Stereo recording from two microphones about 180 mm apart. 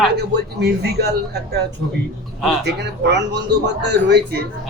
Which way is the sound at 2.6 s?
70° right (ahead or behind).